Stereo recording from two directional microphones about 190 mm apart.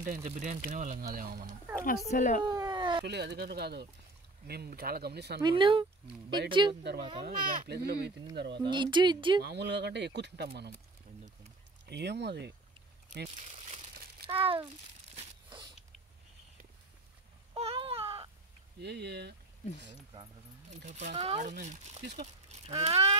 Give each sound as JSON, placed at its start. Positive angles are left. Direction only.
{"t": 0.0, "sound": "speech", "side_deg": -40}
{"t": 1.9, "sound": "speech", "side_deg": 40}
{"t": 2.4, "sound": "a sound", "side_deg": -20}
{"t": 3.1, "sound": "speech", "side_deg": -60}
{"t": 5.4, "sound": "speech", "side_deg": -25}
{"t": 7.2, "sound": "speech", "side_deg": -60}
{"t": 8.5, "sound": "speech", "side_deg": -25}
{"t": 9.4, "sound": "speech", "side_deg": -65}
{"t": 11.8, "sound": "speech", "side_deg": -60}
{"t": 13.4, "sound": "crumpling", "side_deg": -40}
{"t": 14.2, "sound": "speech", "side_deg": -30}
{"t": 17.6, "sound": "baby cry", "side_deg": -30}
{"t": 18.8, "sound": "speech", "side_deg": -60}
{"t": 20.7, "sound": "speech", "side_deg": -40}